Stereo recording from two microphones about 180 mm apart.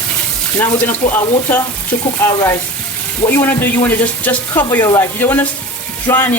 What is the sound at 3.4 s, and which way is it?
Speech, 10° left (ahead or behind).